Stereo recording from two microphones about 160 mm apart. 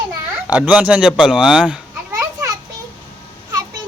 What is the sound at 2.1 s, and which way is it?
Children playing, 20° right (ahead or behind).